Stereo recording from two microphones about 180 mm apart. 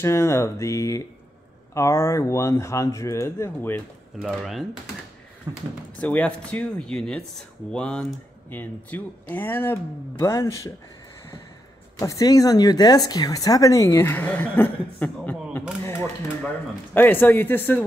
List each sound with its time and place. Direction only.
0.0 s speech: 15° left (ahead or behind)
4.2 s speech: centre (ahead or behind)
5.5 s speech: 20° right (ahead or behind)
5.9 s speech: 5° left (ahead or behind)
12.0 s speech: 20° left (ahead or behind)